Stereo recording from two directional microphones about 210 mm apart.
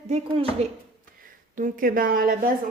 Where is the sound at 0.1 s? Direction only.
30° right (ahead or behind).